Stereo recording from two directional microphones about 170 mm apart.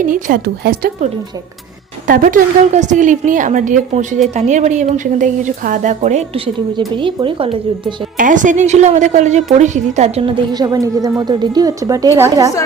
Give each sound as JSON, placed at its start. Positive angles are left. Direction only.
{"t": 0.0, "sound": "a woman's voice", "side_deg": -55}
{"t": 2.0, "sound": "a woman's voice", "side_deg": -55}
{"t": 8.2, "sound": "a woman's voice", "side_deg": -50}
{"t": 10.5, "sound": "a woman's voice", "side_deg": -20}